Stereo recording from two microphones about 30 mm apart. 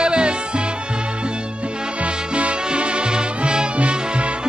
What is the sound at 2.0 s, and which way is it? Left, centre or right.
Music, right.